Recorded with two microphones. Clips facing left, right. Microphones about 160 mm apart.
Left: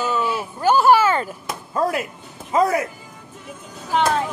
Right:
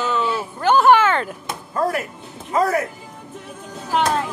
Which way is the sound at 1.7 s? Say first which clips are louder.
Even; 20° left (ahead or behind).